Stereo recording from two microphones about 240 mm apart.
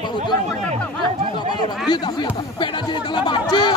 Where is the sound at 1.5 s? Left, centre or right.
Centre.